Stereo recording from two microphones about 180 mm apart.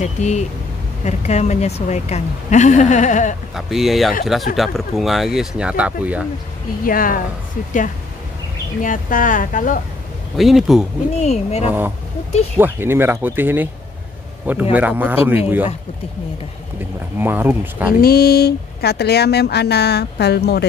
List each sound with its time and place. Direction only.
0.0 s a woman's voice: 40° left (ahead or behind)
3.5 s speech: centre (ahead or behind)
6.8 s speech: 50° left (ahead or behind)
8.8 s speech: 50° left (ahead or behind)
10.3 s speech: centre (ahead or behind)
11.2 s a woman's voice: 35° left (ahead or behind)
12.5 s a man's voice: 10° right (ahead or behind)
17.2 s a man's voice: 10° right (ahead or behind)
18.0 s speech: 60° left (ahead or behind)